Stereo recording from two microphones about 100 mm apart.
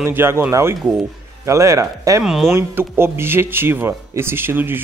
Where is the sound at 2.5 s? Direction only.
25° right (ahead or behind).